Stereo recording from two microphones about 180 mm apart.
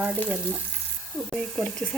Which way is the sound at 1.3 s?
5° left (ahead or behind).